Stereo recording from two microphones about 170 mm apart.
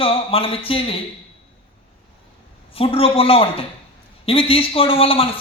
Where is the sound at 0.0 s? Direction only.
35° left (ahead or behind).